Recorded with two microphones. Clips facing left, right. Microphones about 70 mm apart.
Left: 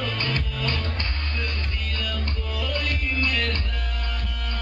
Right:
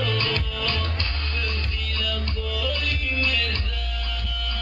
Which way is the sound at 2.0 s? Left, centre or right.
Left.